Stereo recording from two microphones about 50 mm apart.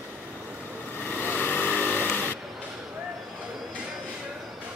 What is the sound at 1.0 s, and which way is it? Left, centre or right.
Motorcycle, left.